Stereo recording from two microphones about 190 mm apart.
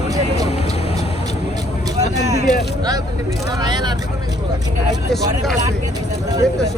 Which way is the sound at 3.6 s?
20° right (ahead or behind).